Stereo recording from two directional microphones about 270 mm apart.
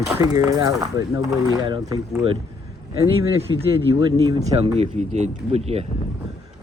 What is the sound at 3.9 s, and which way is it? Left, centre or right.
Speech, centre.